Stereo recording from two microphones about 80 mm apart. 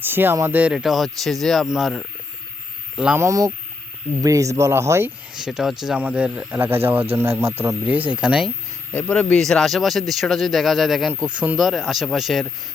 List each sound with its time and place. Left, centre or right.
0.0 s speech: right
0.7 s speech: centre
2.9 s speech: centre
3.2 s speech: right
5.3 s speech: centre
6.0 s speech: centre
6.6 s speech: right
7.9 s speech: right
8.9 s speech: centre
11.1 s speech: centre
11.6 s speech: centre